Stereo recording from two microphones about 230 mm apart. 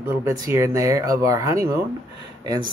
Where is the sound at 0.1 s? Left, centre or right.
Centre.